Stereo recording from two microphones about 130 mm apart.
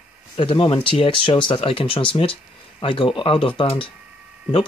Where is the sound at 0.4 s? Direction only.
40° left (ahead or behind).